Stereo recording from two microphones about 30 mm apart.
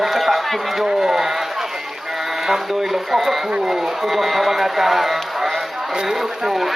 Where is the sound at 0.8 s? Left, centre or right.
Centre.